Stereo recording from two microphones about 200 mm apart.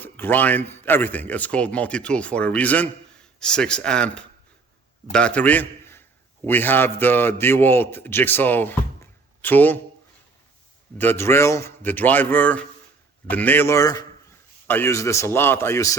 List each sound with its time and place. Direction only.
0.0 s a man's voice: 10° left (ahead or behind)
10.9 s a man's voice: 10° left (ahead or behind)